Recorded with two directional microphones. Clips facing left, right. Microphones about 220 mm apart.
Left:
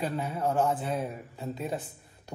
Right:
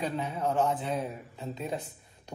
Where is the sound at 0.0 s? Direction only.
5° left (ahead or behind).